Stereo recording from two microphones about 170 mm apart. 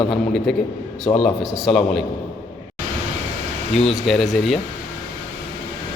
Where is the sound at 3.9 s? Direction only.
Centre (ahead or behind).